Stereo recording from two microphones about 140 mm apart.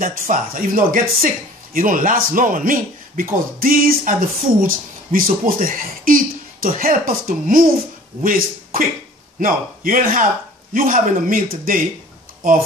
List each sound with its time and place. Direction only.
0.0 s speech: 80° right
3.5 s music: 90° right
4.6 s speech: 90° right